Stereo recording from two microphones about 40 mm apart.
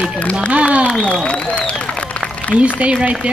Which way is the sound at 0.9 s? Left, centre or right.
Left.